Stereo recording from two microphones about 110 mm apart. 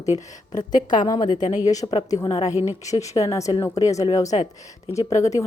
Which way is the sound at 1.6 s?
35° left (ahead or behind).